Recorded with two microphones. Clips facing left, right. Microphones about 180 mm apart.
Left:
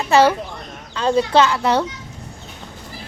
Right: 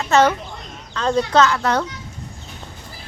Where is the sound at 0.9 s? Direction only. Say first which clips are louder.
Left 1 dB; 10° left (ahead or behind).